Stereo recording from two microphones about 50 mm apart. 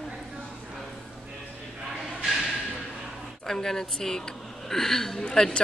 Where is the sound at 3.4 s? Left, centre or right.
Centre.